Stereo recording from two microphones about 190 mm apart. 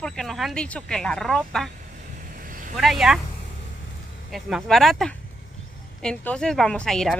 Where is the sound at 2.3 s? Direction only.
45° right (ahead or behind).